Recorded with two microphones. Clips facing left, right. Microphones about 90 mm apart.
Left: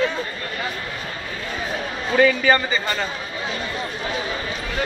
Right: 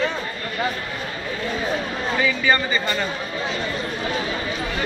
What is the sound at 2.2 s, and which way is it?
Speech, 55° left (ahead or behind).